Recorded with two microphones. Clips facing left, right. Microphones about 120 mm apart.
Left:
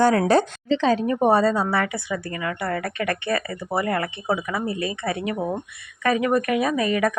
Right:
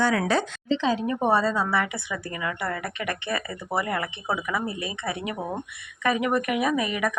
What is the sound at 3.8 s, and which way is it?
Speech, 50° left (ahead or behind).